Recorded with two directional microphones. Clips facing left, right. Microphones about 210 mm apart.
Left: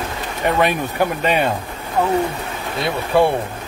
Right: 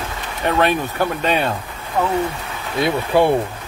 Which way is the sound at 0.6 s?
10° left (ahead or behind).